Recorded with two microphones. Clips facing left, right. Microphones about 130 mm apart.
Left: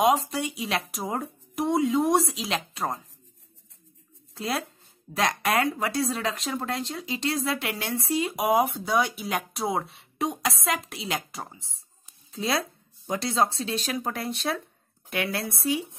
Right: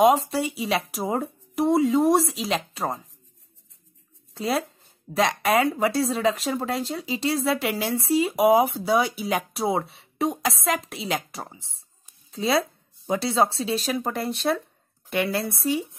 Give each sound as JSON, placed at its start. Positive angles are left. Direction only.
{"t": 0.0, "sound": "speech", "side_deg": 0}
{"t": 4.3, "sound": "speech", "side_deg": 0}